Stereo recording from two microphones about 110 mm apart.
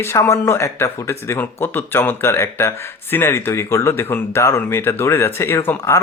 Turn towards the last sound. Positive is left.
turn(degrees=25)  # may be behind; listen again after turning